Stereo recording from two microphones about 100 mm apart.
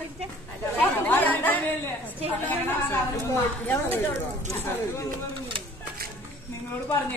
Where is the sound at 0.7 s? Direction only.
15° left (ahead or behind).